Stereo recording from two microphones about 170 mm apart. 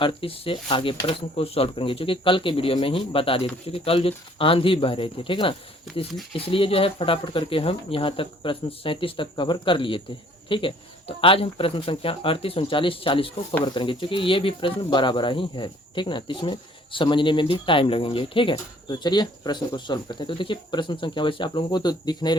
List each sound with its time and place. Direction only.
0.0 s speech: 30° left (ahead or behind)